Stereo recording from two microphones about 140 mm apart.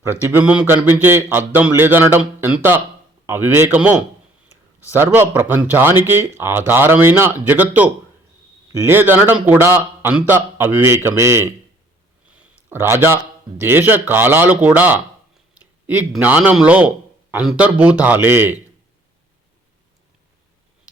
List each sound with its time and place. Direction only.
0.0 s speech: 15° right (ahead or behind)
12.4 s a sound: 15° right (ahead or behind)
13.6 s speech: 15° right (ahead or behind)